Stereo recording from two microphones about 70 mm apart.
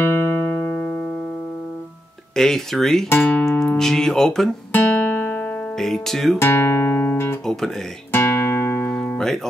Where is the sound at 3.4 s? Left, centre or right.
Centre.